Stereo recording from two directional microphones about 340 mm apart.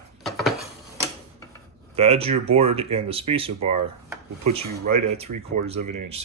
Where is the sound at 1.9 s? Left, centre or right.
Centre.